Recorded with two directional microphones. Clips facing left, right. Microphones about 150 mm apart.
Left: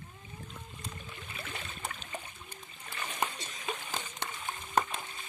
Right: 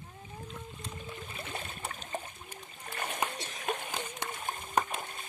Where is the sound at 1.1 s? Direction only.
25° right (ahead or behind).